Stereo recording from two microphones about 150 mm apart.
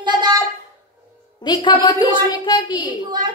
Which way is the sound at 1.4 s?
30° left (ahead or behind).